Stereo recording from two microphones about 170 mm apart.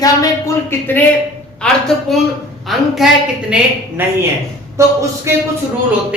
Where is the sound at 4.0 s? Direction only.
10° right (ahead or behind).